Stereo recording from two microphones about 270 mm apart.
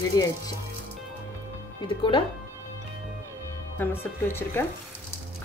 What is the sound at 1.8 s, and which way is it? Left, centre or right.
Speech, centre.